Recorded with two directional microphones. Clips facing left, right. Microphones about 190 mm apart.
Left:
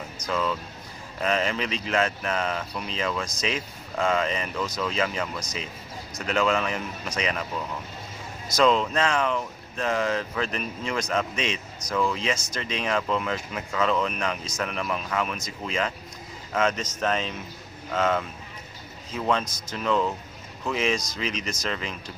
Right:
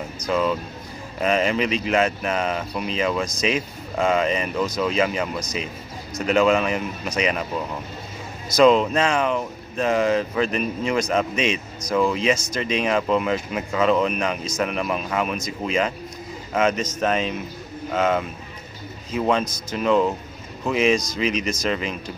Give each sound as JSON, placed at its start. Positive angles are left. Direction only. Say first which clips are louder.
{"t": 0.3, "sound": "speech", "louder": "right 6 dB", "side_deg": -15}
{"t": 8.5, "sound": "speech", "louder": "right 6 dB", "side_deg": -15}